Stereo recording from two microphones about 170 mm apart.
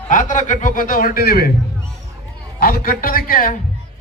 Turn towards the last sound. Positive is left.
turn(degrees=55)  # may be behind; listen again after turning